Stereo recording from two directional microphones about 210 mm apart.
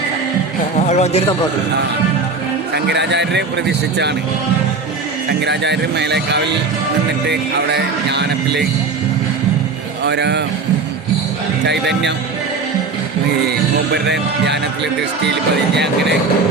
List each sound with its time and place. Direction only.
0.8 s speech: 35° left (ahead or behind)
2.7 s a man's voice: 55° right (ahead or behind)
5.4 s speech: 55° right (ahead or behind)
10.0 s speech: 55° right (ahead or behind)
11.6 s a man's voice: 55° right (ahead or behind)
13.5 s a man's voice: 55° right (ahead or behind)